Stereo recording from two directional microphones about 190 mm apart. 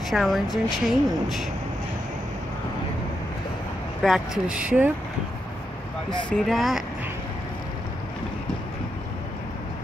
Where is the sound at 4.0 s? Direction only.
5° right (ahead or behind).